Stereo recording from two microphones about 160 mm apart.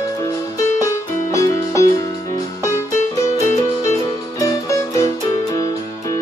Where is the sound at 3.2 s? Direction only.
20° left (ahead or behind).